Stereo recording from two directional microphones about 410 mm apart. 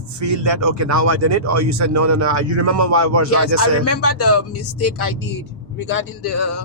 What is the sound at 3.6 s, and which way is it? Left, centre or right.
Speech, left.